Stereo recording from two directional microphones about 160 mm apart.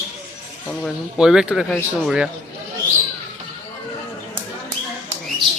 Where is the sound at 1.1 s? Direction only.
5° right (ahead or behind).